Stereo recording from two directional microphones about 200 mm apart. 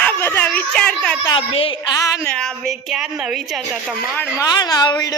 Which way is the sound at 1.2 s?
25° left (ahead or behind).